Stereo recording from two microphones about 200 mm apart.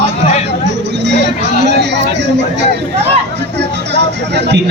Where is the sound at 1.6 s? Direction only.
60° right (ahead or behind).